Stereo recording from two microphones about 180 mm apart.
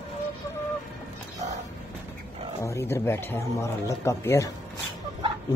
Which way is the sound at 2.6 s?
15° left (ahead or behind).